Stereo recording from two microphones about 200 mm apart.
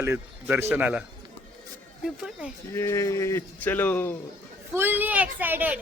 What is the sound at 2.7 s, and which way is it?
Speech, 15° left (ahead or behind).